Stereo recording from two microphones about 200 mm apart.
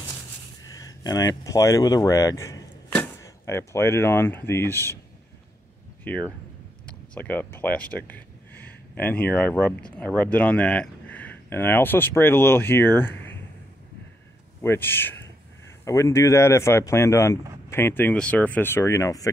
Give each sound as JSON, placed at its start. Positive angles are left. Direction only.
{"t": 0.7, "sound": "speech", "side_deg": 20}
{"t": 6.0, "sound": "speech", "side_deg": 5}
{"t": 14.6, "sound": "speech", "side_deg": 10}